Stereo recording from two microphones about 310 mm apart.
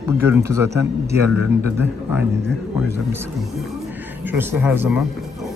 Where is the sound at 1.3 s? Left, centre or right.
Left.